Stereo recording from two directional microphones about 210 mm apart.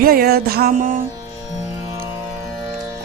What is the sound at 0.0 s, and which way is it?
Music, 45° right (ahead or behind).